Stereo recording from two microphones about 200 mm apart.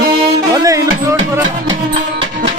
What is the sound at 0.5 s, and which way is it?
Music, 15° right (ahead or behind).